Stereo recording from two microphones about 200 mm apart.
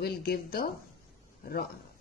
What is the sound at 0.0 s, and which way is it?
Speech, 50° left (ahead or behind).